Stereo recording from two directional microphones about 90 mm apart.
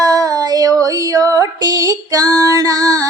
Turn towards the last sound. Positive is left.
turn(degrees=-45)  # may be behind; listen again after turning